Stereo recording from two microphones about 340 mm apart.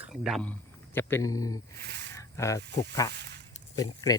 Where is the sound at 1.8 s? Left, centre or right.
Right.